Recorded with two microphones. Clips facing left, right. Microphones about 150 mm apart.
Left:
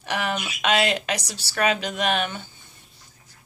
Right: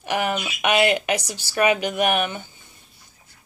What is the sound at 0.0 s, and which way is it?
Speech, 15° right (ahead or behind).